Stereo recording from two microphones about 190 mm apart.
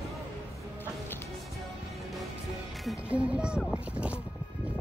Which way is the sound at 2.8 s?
5° right (ahead or behind).